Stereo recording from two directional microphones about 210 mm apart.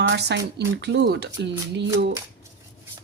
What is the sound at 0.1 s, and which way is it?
Speech, 55° right (ahead or behind).